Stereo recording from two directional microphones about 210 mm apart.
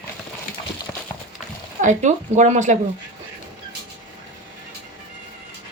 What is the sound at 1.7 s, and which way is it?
Speech, 35° right (ahead or behind).